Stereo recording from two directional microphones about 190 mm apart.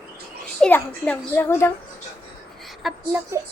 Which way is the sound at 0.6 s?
5° left (ahead or behind).